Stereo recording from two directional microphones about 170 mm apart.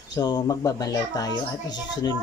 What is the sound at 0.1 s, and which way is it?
A child's voice, 25° left (ahead or behind).